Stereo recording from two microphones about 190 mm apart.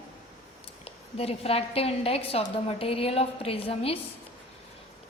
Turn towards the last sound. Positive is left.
turn(degrees=30)  # may be behind; listen again after turning